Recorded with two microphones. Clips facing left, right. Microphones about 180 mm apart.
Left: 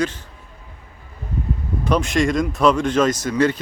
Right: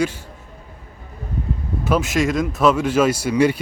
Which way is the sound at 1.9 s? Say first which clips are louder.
Even; 5° right (ahead or behind).